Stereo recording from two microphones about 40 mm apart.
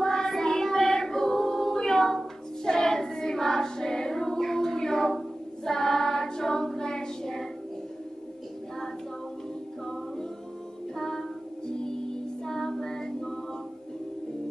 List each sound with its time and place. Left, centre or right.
0.0 s choir: centre
11.0 s music: centre